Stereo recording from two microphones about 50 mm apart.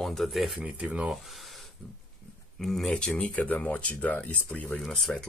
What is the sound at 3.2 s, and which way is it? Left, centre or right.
Speech, left.